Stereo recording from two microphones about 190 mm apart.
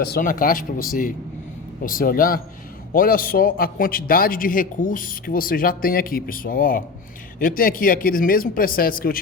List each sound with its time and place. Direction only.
0.2 s a man's voice: 45° left (ahead or behind)